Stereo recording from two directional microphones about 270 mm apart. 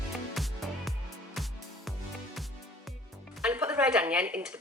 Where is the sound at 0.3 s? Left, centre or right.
Centre.